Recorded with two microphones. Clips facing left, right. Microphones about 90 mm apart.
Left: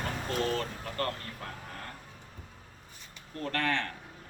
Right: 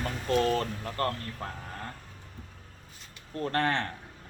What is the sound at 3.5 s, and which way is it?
Speech, 35° right (ahead or behind).